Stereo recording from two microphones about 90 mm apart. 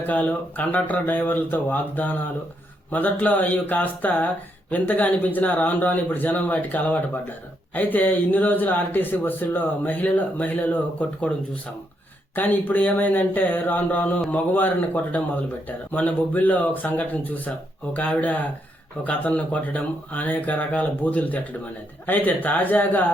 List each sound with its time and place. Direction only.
0.1 s speech: 15° left (ahead or behind)
12.3 s speech: 20° left (ahead or behind)